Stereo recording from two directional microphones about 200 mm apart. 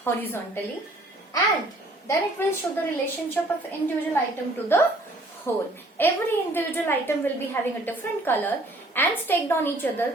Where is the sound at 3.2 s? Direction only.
10° left (ahead or behind).